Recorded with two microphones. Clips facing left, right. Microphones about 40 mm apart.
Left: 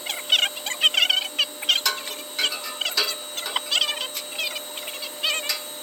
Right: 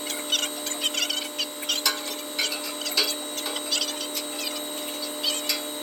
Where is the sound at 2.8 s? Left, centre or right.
Left.